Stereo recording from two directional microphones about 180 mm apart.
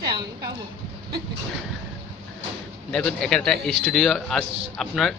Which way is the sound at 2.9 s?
5° left (ahead or behind).